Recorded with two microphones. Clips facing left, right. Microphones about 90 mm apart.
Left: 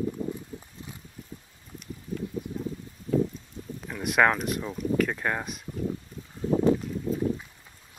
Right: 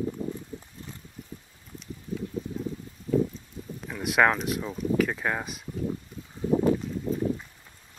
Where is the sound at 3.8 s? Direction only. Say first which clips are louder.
Even; centre (ahead or behind).